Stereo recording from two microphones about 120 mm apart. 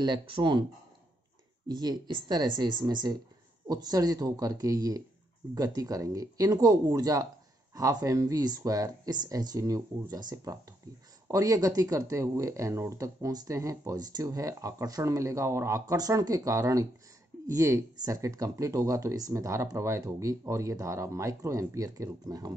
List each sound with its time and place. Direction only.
0.0 s speech: 40° right (ahead or behind)
1.7 s speech: 35° right (ahead or behind)